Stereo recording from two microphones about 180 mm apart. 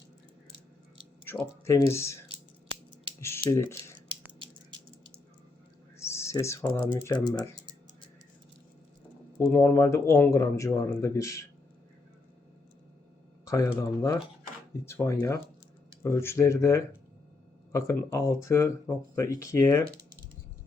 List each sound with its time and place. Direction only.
1.2 s speech: 10° left (ahead or behind)
3.2 s speech: 15° left (ahead or behind)
6.0 s typing: 15° left (ahead or behind)
7.1 s speech: 25° left (ahead or behind)
9.6 s speech: 15° left (ahead or behind)
13.4 s a sound: 15° left (ahead or behind)
13.7 s speech: 20° left (ahead or behind)